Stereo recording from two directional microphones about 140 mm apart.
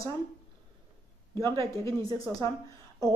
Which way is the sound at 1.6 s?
20° left (ahead or behind).